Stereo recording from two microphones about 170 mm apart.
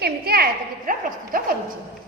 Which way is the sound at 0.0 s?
65° right (ahead or behind).